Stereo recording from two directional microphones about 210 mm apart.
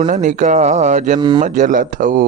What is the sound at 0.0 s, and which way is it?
Speech, 35° right (ahead or behind).